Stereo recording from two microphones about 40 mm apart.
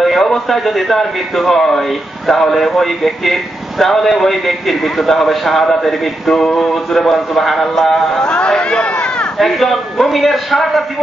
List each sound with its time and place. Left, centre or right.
0.0 s a man's voice: centre
8.2 s speech: left
9.4 s a man's voice: centre